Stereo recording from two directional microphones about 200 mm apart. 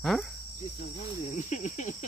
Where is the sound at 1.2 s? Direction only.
40° left (ahead or behind).